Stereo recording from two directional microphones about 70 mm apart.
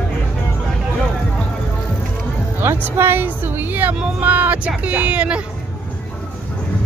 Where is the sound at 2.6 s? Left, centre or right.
Right; by 5.4 s centre.